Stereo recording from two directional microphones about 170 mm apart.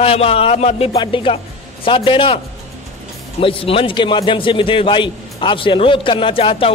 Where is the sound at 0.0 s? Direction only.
35° left (ahead or behind).